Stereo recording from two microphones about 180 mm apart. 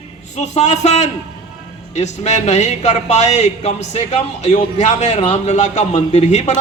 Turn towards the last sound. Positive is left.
turn(degrees=40)  # may be behind; listen again after turning